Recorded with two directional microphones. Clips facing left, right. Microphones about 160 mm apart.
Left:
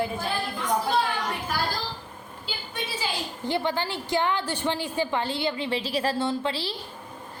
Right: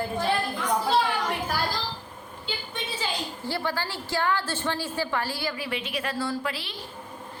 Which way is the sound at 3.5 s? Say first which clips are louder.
Left 4 dB; 20° left (ahead or behind).